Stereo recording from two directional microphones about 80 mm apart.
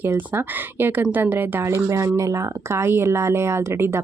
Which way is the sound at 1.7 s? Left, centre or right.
Right.